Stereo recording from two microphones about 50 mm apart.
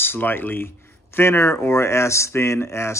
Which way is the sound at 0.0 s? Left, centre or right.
Left.